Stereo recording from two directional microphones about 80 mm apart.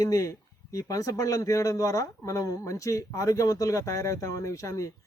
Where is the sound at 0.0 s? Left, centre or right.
Left.